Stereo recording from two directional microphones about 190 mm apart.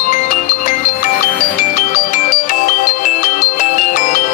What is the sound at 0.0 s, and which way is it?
Music, 40° left (ahead or behind).